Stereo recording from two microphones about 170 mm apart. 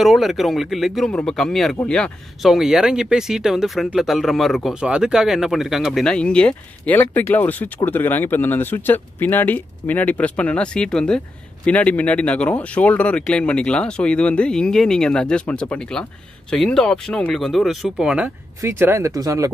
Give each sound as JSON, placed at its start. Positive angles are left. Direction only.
{"t": 0.0, "sound": "speech", "side_deg": 0}